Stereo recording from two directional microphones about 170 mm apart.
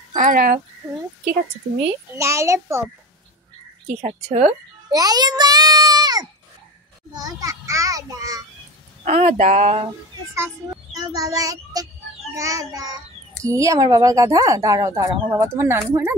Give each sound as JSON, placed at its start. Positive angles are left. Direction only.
{"t": 0.1, "sound": "speech", "side_deg": -50}
{"t": 2.1, "sound": "a child's voice", "side_deg": -15}
{"t": 4.0, "sound": "speech", "side_deg": -35}
{"t": 4.9, "sound": "a child's voice", "side_deg": -25}
{"t": 9.0, "sound": "speech", "side_deg": -45}
{"t": 10.3, "sound": "a child's voice", "side_deg": -15}